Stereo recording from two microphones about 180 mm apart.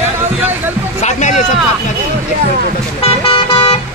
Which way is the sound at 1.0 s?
40° left (ahead or behind).